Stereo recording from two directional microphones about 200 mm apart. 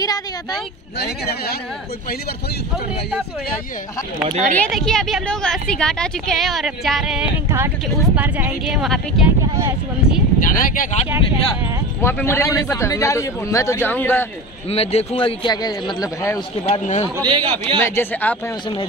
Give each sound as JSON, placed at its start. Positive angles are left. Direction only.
{"t": 0.0, "sound": "vehicle", "side_deg": 20}
{"t": 0.9, "sound": "speech", "side_deg": 55}
{"t": 4.3, "sound": "speech", "side_deg": -35}
{"t": 4.6, "sound": "a woman's voice", "side_deg": 0}
{"t": 7.4, "sound": "a woman's voice", "side_deg": -10}
{"t": 10.4, "sound": "speech", "side_deg": 45}
{"t": 12.0, "sound": "a man's voice", "side_deg": 10}
{"t": 14.7, "sound": "a man's voice", "side_deg": 30}
{"t": 16.6, "sound": "a man's voice", "side_deg": 35}
{"t": 17.2, "sound": "a man's voice", "side_deg": -25}
{"t": 17.8, "sound": "a man's voice", "side_deg": 10}